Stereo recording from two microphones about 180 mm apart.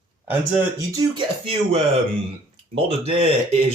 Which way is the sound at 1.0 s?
30° right (ahead or behind).